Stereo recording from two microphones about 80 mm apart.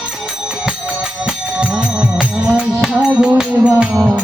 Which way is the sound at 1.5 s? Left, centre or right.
Centre.